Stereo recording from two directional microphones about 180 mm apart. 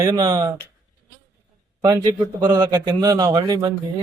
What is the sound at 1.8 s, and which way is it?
Speech, 20° right (ahead or behind).